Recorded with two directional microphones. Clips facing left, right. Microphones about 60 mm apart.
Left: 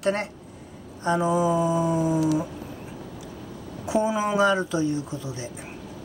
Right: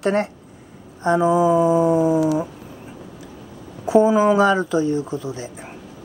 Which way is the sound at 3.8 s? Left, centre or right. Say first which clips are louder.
Right 9 dB; right.